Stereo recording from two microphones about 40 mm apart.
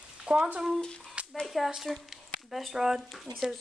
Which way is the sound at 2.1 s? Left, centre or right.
Centre.